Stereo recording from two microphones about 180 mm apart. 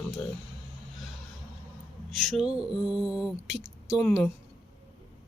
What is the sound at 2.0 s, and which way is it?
Speech, centre (ahead or behind).